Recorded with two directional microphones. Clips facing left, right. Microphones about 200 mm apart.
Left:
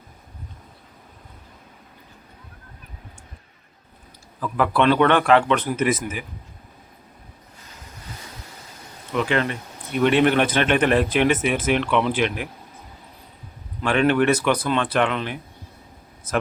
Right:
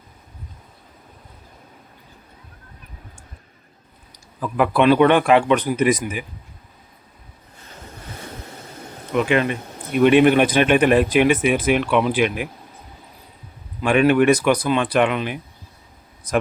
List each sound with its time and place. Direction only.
4.5 s speech: 15° right (ahead or behind)
9.1 s speech: 15° right (ahead or behind)
13.8 s speech: 15° right (ahead or behind)